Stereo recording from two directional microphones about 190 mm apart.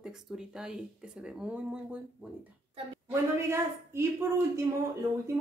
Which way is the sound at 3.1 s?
15° right (ahead or behind).